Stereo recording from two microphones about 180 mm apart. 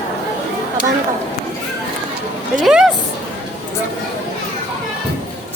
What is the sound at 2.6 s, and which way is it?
Speech, centre (ahead or behind).